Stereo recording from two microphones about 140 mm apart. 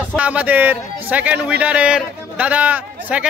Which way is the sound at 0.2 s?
10° right (ahead or behind).